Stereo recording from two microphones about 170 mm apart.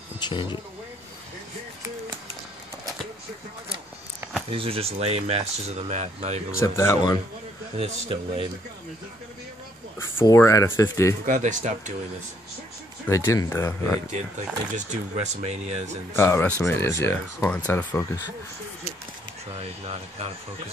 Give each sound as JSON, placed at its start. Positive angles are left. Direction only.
{"t": 0.2, "sound": "speech", "side_deg": 25}
{"t": 4.5, "sound": "speech", "side_deg": -35}
{"t": 6.6, "sound": "speech", "side_deg": 15}
{"t": 7.7, "sound": "speech", "side_deg": -35}
{"t": 9.9, "sound": "speech", "side_deg": 15}
{"t": 11.2, "sound": "speech", "side_deg": -50}
{"t": 13.1, "sound": "speech", "side_deg": 20}
{"t": 14.7, "sound": "speech", "side_deg": -45}
{"t": 16.1, "sound": "speech", "side_deg": 15}
{"t": 19.6, "sound": "speech", "side_deg": -35}